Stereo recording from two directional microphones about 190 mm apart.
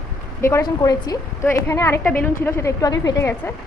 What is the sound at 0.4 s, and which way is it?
A woman's voice, 20° left (ahead or behind).